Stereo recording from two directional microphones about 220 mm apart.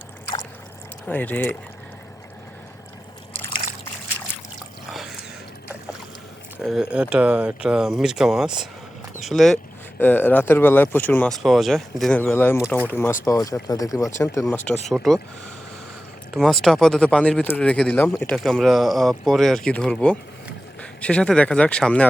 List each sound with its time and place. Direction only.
1.0 s speech: 5° left (ahead or behind)
4.9 s drip: centre (ahead or behind)
6.6 s speech: centre (ahead or behind)
16.3 s speech: centre (ahead or behind)